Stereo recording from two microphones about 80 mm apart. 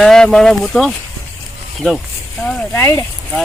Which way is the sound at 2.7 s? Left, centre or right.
Left.